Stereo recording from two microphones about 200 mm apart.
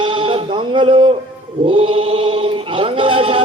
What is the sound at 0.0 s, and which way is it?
Sheep, 25° right (ahead or behind).